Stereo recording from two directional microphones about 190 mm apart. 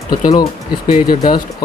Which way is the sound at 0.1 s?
20° left (ahead or behind).